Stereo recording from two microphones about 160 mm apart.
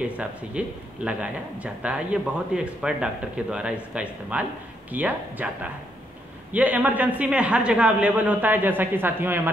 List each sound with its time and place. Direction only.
0.0 s a man's voice: 5° right (ahead or behind)